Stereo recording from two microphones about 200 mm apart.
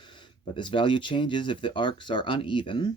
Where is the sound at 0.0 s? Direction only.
25° left (ahead or behind).